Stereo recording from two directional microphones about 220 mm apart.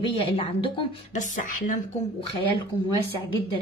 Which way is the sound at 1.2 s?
35° left (ahead or behind).